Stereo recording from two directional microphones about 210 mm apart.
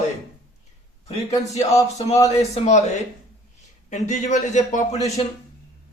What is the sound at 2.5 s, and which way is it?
A man's voice, 35° left (ahead or behind).